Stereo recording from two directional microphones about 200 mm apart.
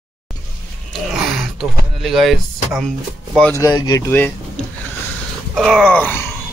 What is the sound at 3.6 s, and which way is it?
Speech, 20° left (ahead or behind).